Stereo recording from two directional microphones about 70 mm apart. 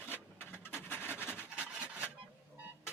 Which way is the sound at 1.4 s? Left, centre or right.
Centre.